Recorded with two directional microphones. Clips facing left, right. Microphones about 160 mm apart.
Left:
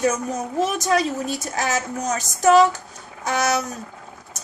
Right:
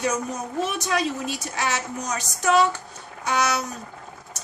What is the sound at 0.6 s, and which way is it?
A woman's voice, 40° left (ahead or behind).